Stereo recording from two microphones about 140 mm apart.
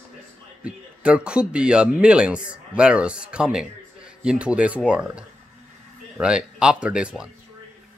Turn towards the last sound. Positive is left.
turn(degrees=-5)  # may be behind; listen again after turning